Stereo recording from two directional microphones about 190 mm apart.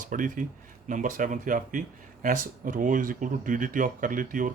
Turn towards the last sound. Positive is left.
turn(degrees=-45)  # may be behind; listen again after turning